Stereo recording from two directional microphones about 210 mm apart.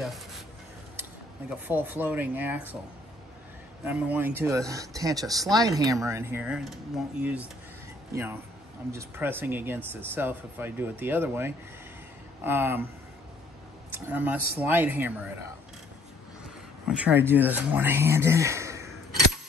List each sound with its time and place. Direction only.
1.5 s speech: 10° right (ahead or behind)
3.8 s speech: 10° right (ahead or behind)
13.9 s speech: 10° right (ahead or behind)
16.8 s speech: 10° right (ahead or behind)